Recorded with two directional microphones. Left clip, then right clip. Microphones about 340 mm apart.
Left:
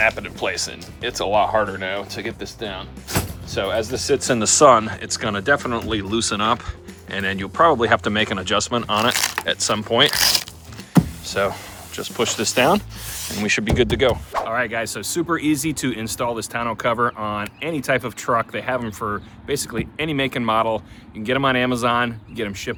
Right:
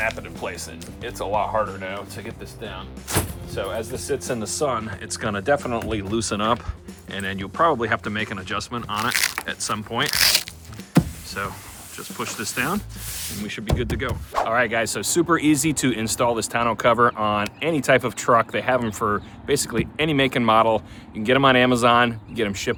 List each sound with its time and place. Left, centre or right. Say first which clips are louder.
0.0 s speech: left 6 dB; left
4.6 s speech: left 13 dB; centre
10.9 s power windows: left 4 dB; centre
11.9 s speech: left 8 dB; centre
14.3 s speech: right 2 dB; centre